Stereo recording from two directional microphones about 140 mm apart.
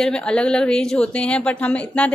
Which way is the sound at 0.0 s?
5° left (ahead or behind).